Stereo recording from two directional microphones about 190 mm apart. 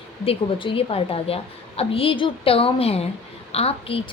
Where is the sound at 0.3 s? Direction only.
30° left (ahead or behind).